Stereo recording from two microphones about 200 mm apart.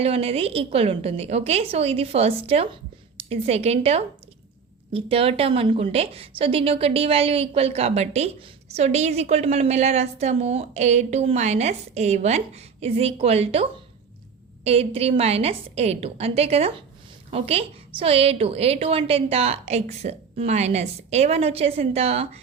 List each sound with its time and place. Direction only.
0.0 s a woman's voice: 30° right (ahead or behind)